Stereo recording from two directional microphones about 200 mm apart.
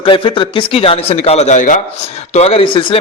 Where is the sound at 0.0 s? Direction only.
25° left (ahead or behind).